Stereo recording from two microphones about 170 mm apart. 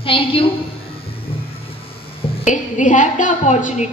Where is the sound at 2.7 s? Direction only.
45° left (ahead or behind).